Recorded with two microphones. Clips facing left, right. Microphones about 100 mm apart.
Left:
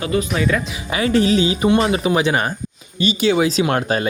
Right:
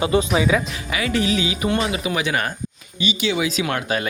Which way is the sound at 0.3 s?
5° right (ahead or behind).